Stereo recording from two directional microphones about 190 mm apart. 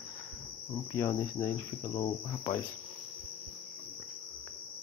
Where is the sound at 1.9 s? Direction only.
25° left (ahead or behind).